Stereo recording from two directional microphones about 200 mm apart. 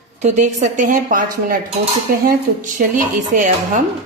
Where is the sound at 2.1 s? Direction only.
45° right (ahead or behind).